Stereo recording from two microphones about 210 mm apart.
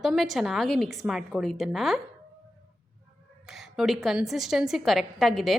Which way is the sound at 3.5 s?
Centre (ahead or behind).